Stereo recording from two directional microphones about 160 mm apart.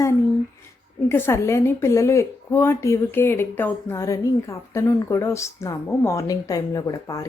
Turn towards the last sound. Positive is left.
turn(degrees=20)  # may be behind; listen again after turning